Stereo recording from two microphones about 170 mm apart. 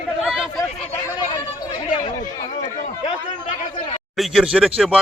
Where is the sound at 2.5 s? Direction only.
50° left (ahead or behind).